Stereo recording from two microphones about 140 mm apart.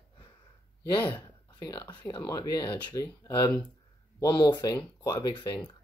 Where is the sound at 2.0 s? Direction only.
25° left (ahead or behind).